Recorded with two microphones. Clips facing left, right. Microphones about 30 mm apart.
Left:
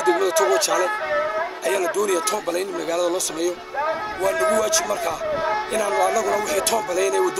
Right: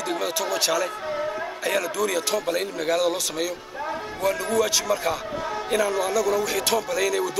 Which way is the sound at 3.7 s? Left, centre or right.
Left.